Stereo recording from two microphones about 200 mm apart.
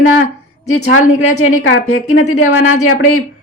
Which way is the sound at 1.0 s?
35° left (ahead or behind).